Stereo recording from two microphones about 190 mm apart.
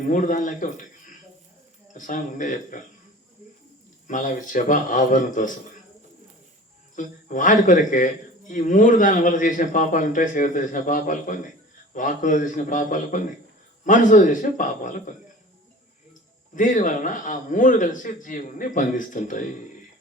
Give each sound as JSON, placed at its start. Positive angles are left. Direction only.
{"t": 0.1, "sound": "a man's voice", "side_deg": 45}
{"t": 1.9, "sound": "a man's voice", "side_deg": 45}
{"t": 4.0, "sound": "a man's voice", "side_deg": 40}
{"t": 6.9, "sound": "a man's voice", "side_deg": 40}
{"t": 16.6, "sound": "a man's voice", "side_deg": 40}